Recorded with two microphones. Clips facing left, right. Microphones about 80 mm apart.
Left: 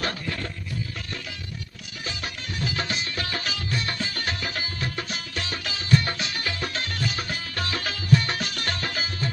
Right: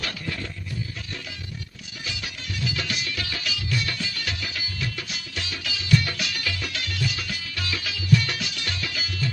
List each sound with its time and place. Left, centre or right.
2.0 s music: left